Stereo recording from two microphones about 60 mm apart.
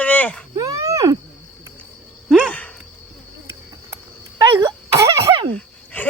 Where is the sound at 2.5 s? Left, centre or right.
Left.